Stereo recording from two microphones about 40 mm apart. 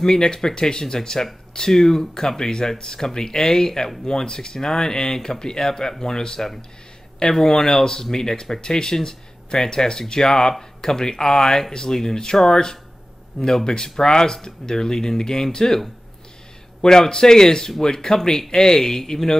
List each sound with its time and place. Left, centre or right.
0.0 s speech: centre
16.8 s speech: centre